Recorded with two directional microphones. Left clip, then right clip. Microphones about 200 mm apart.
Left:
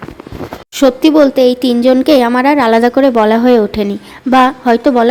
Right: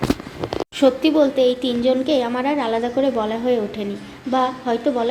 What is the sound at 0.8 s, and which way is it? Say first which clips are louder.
Speech: left 8 dB; 55° left (ahead or behind).